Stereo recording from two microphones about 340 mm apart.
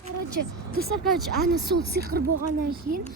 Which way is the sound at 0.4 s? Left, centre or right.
Right.